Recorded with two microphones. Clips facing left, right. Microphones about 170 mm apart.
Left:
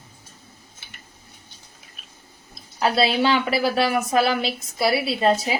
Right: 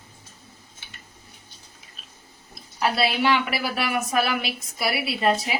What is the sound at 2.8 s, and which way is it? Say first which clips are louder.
A woman's voice: left 3 dB; 30° left (ahead or behind).